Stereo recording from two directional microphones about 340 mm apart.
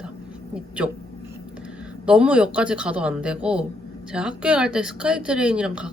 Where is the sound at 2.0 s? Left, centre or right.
Centre.